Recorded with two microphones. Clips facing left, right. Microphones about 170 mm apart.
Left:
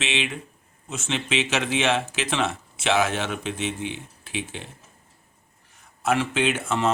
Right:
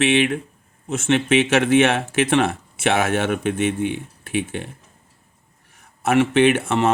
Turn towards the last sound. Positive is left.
turn(degrees=-65)  # may be behind; listen again after turning